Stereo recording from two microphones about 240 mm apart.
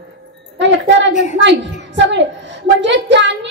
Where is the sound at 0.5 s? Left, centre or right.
Right.